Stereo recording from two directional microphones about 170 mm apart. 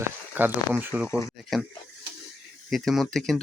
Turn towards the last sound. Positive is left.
turn(degrees=5)  # may be behind; listen again after turning